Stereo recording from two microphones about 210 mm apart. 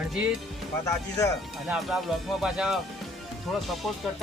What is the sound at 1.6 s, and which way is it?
Speech, 5° right (ahead or behind).